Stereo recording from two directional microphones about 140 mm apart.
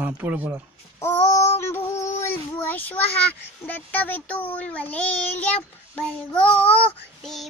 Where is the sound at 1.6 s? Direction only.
15° left (ahead or behind).